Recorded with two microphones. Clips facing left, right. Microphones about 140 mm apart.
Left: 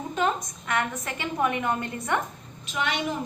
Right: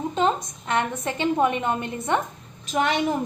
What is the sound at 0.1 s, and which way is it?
A woman's voice, 25° right (ahead or behind).